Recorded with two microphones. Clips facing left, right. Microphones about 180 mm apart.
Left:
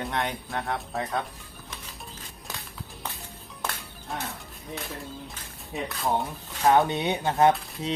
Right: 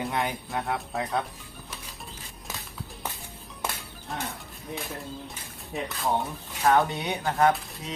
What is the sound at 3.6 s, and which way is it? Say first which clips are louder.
Music: even; 10° right (ahead or behind).